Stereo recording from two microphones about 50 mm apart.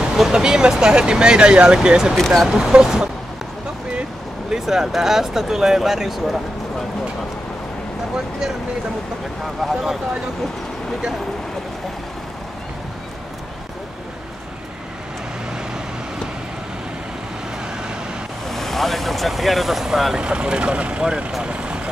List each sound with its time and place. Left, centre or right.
0.2 s speech: centre
2.1 s speech: centre
2.4 s speech: centre
4.5 s speech: centre
9.4 s speech: centre
18.5 s speech: centre
20.2 s speech: centre